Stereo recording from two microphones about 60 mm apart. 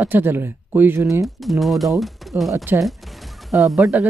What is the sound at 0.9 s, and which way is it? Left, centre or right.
Speech, right.